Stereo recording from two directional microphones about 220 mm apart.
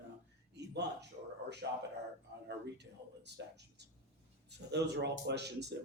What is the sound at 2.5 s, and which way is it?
Speech, 50° right (ahead or behind).